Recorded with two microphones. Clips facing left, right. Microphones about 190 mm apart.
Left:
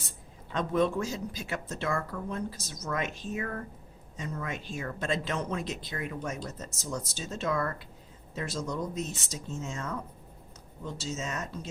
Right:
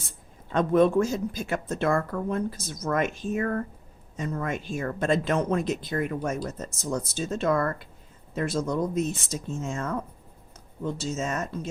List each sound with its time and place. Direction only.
0.5 s speech: 55° right (ahead or behind)